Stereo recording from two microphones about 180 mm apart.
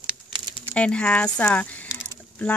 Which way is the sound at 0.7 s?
5° left (ahead or behind).